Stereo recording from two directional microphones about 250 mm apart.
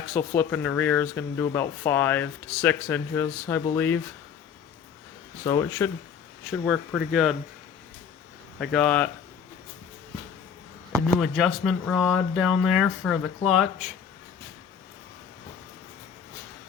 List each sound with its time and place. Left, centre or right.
0.1 s speech: centre
5.5 s speech: centre
8.5 s speech: centre
11.2 s speech: centre